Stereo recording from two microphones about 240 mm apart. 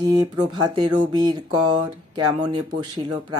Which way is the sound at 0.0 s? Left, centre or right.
Centre.